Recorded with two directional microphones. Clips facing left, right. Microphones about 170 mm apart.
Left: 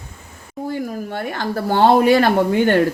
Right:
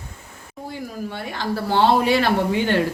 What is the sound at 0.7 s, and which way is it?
Speech, 50° left (ahead or behind).